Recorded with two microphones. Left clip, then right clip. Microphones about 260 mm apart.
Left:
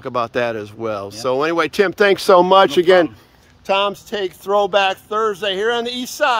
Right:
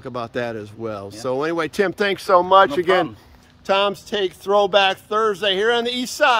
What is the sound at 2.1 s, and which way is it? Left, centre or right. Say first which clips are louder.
Speech: left 2 dB; left.